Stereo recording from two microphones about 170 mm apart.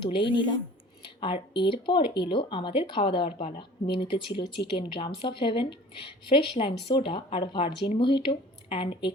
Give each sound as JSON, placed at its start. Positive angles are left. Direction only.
{"t": 0.0, "sound": "speech", "side_deg": 30}